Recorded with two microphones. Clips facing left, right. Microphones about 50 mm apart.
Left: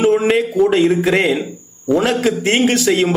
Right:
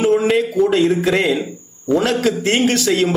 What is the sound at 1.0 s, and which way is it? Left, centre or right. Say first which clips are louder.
A man's voice: left 1 dB; centre.